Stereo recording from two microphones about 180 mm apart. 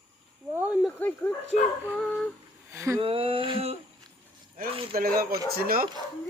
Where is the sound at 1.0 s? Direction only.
10° left (ahead or behind).